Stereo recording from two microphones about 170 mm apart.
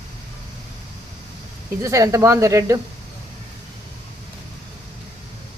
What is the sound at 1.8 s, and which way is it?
Speech, 20° right (ahead or behind).